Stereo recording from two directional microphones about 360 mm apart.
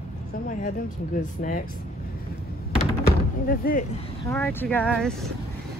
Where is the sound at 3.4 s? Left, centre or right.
Left.